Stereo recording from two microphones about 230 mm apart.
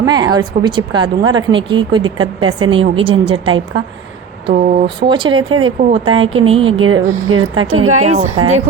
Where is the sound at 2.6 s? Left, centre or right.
Right.